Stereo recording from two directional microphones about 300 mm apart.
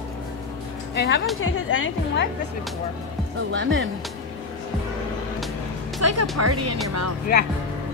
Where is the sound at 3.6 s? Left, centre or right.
Right.